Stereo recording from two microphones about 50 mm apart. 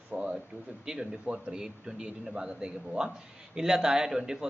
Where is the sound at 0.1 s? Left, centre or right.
Right.